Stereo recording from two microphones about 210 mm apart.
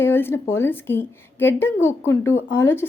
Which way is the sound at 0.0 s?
10° left (ahead or behind).